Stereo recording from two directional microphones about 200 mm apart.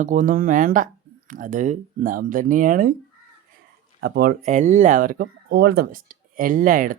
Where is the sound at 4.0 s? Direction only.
50° right (ahead or behind).